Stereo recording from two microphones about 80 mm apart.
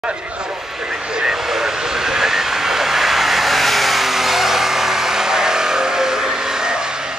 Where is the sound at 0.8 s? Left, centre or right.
Centre.